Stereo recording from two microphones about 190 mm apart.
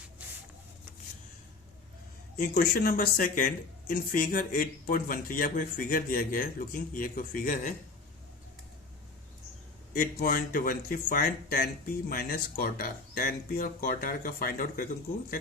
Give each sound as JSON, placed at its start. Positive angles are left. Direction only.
{"t": 2.4, "sound": "speech", "side_deg": 50}
{"t": 9.9, "sound": "speech", "side_deg": 50}